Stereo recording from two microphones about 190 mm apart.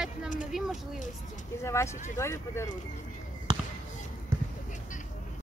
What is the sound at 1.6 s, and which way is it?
Speech, 15° left (ahead or behind).